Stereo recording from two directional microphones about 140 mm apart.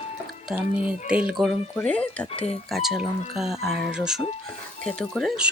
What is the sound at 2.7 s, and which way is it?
Speech, centre (ahead or behind).